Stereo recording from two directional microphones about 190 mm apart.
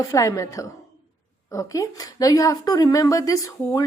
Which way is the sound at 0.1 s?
15° left (ahead or behind).